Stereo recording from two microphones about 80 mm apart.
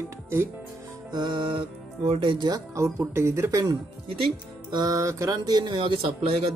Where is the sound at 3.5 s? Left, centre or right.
Right.